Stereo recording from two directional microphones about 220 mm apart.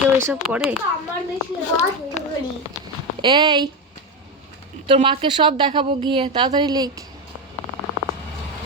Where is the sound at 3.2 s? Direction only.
20° right (ahead or behind).